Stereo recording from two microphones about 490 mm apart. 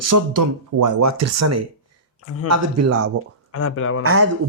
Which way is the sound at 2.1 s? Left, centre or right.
Left.